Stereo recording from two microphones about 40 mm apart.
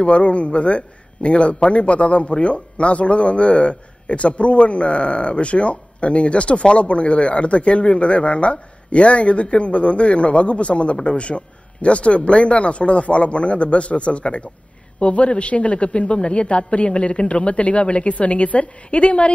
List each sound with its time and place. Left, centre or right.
0.0 s a man's voice: left